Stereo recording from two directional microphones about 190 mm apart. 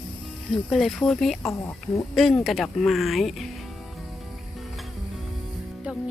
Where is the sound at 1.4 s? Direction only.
15° left (ahead or behind).